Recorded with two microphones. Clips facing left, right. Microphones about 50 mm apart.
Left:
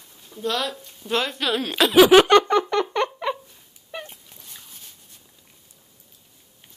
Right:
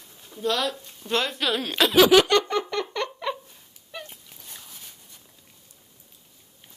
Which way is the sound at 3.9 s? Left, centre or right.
Left.